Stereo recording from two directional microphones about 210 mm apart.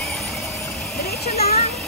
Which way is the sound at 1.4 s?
50° left (ahead or behind).